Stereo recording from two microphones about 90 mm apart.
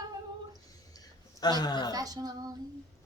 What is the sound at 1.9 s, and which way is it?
Speech, 45° right (ahead or behind).